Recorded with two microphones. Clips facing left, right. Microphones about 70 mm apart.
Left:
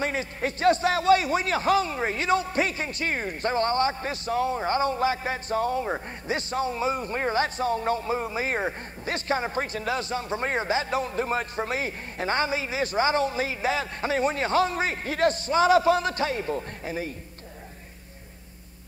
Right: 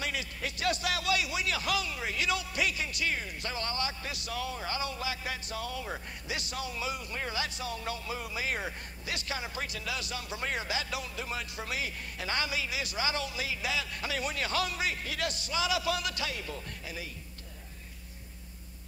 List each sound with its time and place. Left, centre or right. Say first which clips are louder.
0.0 s a man's voice: left 8 dB; left